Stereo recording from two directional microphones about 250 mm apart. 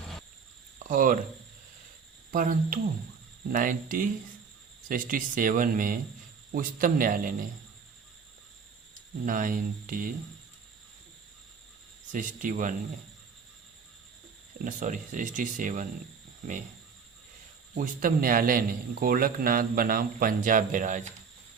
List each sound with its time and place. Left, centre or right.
0.9 s speech: right
2.3 s speech: right
9.2 s speech: right
12.1 s speech: right
14.6 s speech: right
17.7 s speech: right